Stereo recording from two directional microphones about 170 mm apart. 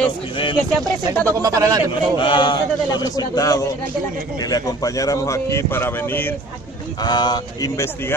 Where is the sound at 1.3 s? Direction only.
20° right (ahead or behind).